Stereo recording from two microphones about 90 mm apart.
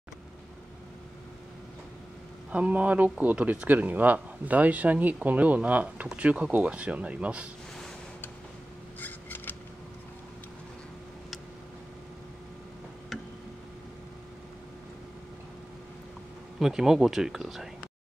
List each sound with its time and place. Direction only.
2.5 s speech: 15° right (ahead or behind)
9.0 s scissors: 20° left (ahead or behind)
16.5 s speech: 5° right (ahead or behind)